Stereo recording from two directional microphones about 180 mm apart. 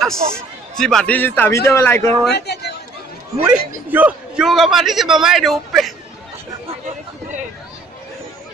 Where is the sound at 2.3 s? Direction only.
65° left (ahead or behind).